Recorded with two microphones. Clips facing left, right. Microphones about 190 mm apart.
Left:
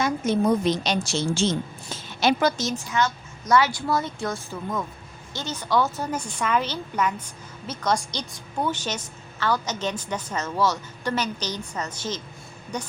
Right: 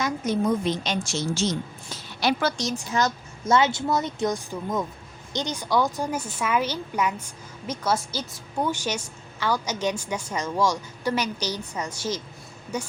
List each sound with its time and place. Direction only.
0.0 s a woman's voice: 30° left (ahead or behind)
0.6 s speech: 85° left
0.9 s a woman's voice: 30° left (ahead or behind)
2.9 s a woman's voice: 35° right (ahead or behind)
3.5 s a woman's voice: 25° right (ahead or behind); by 12.9 s 10° right (ahead or behind)